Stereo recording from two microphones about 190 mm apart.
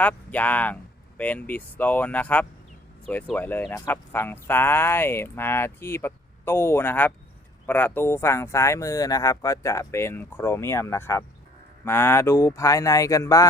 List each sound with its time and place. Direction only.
0.0 s speech: 10° left (ahead or behind)